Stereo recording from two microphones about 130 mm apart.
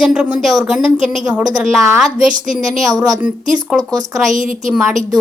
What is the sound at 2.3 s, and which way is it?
Speech, 90° right.